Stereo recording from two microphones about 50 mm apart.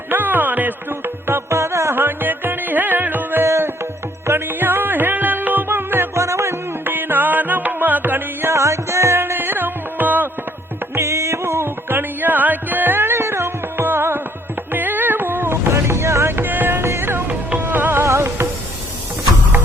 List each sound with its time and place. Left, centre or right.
0.1 s music: right
1.5 s music: right
2.0 s music: right
3.4 s music: right
4.3 s music: right
6.1 s music: right
6.8 s music: right
8.5 s music: right
11.0 s music: right
11.9 s music: right
14.7 s music: right
15.7 s music: right
18.0 s music: right